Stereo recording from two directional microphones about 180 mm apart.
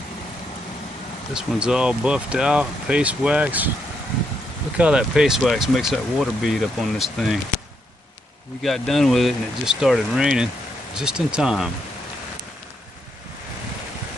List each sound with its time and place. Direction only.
1.3 s speech: 5° right (ahead or behind)
4.7 s speech: 5° right (ahead or behind)
8.6 s speech: centre (ahead or behind)